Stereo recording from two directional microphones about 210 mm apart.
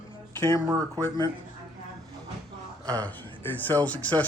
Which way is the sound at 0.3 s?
15° right (ahead or behind).